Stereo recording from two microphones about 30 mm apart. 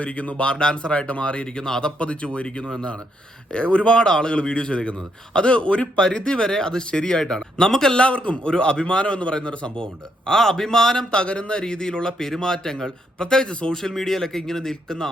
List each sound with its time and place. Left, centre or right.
0.0 s speech: left
0.4 s a man's voice: left
2.0 s a man's voice: left
2.6 s speech: left
3.5 s a man's voice: left; by 7.9 s centre
7.9 s a man's voice: left
10.2 s speech: centre
11.1 s a man's voice: left
13.9 s speech: centre